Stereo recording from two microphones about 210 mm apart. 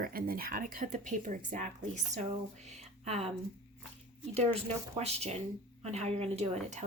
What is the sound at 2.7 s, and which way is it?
Music, 30° right (ahead or behind).